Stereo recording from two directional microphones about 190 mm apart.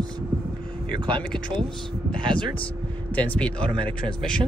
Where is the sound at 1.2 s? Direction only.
5° left (ahead or behind).